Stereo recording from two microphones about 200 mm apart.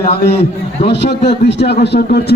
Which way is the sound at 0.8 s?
60° left (ahead or behind).